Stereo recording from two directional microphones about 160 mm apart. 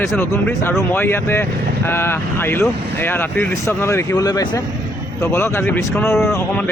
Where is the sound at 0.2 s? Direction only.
15° left (ahead or behind).